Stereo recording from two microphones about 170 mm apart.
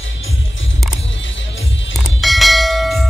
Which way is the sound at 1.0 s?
90° left.